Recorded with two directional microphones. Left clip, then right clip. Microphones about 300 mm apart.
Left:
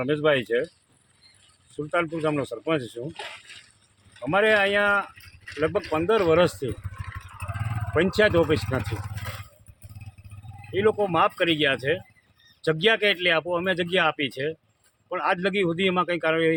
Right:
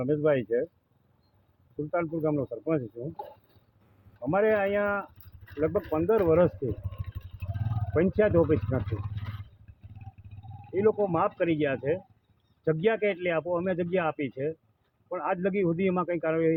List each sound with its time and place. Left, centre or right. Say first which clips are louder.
0.0 s speech: left 3 dB; centre
1.9 s speech: left 4 dB; centre
4.2 s speech: left 4 dB; centre
5.9 s vehicle: left 3 dB; centre
7.9 s speech: left 3 dB; centre
9.0 s a sound: left 7 dB; left
10.8 s speech: left 4 dB; centre